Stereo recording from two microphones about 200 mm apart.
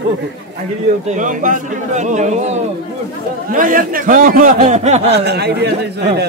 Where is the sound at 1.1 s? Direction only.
40° right (ahead or behind).